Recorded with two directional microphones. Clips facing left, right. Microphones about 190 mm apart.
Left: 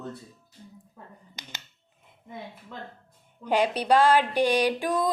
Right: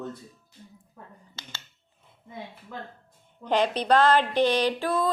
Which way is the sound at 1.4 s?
15° left (ahead or behind).